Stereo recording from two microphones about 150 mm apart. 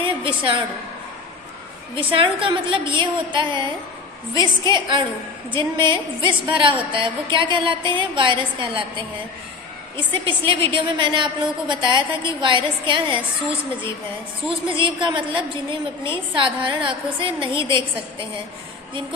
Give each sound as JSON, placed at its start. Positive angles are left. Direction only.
{"t": 0.0, "sound": "a sound", "side_deg": -35}
{"t": 2.1, "sound": "a woman's voice", "side_deg": -35}
{"t": 10.1, "sound": "a woman's voice", "side_deg": -35}
{"t": 14.8, "sound": "a woman's voice", "side_deg": -35}